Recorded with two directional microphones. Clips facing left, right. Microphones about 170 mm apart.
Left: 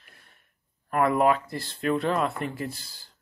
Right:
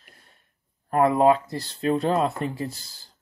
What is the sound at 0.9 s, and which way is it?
Speech, 30° right (ahead or behind).